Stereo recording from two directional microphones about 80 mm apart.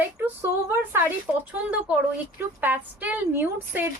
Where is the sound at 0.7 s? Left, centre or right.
Right.